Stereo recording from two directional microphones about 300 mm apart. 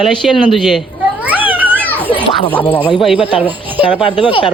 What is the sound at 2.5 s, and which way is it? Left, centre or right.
Speech, centre.